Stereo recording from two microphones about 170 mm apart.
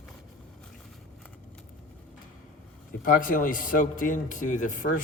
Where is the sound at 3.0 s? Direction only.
55° left (ahead or behind).